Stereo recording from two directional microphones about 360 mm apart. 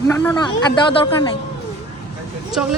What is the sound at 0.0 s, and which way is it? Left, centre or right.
A man's voice, centre.